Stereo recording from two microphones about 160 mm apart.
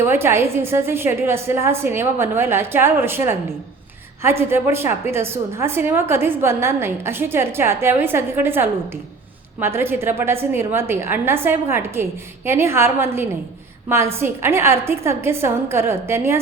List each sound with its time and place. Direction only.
0.0 s a woman's voice: 15° right (ahead or behind)